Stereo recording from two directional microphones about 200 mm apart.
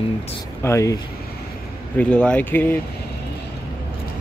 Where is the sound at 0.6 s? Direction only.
15° left (ahead or behind).